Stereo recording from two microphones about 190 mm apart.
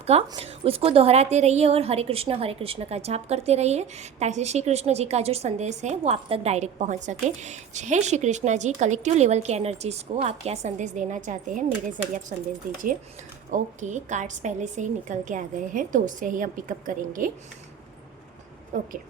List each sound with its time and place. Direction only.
0.0 s a woman's voice: 30° right (ahead or behind)
13.5 s a woman's voice: 40° right (ahead or behind)